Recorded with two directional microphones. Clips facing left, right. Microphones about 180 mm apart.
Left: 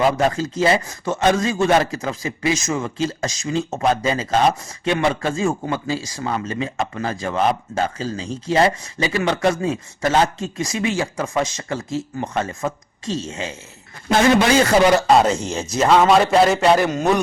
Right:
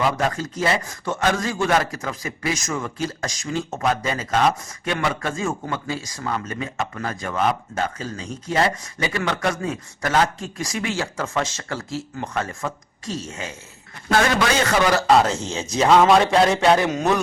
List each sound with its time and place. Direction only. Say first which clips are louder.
0.2 s speech: left 5 dB; 25° left (ahead or behind)
15.4 s a man's voice: left 1 dB; 10° left (ahead or behind)